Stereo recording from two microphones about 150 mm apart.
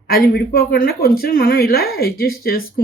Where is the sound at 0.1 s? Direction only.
80° left.